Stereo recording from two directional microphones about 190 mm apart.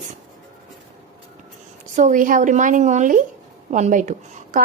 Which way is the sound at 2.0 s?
40° right (ahead or behind).